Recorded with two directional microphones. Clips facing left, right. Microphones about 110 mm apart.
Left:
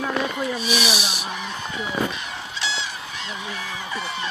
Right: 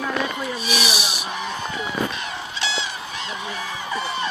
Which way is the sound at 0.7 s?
25° left (ahead or behind).